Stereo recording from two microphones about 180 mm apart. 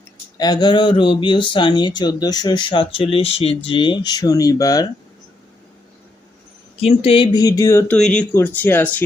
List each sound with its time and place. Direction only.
0.3 s speech: 20° left (ahead or behind)
6.7 s speech: 30° left (ahead or behind); by 9.0 s 10° left (ahead or behind)